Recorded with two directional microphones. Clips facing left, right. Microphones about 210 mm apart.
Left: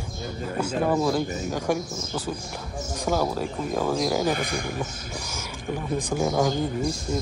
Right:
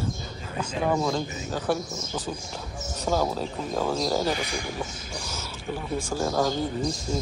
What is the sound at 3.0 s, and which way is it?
A man's voice, 10° left (ahead or behind).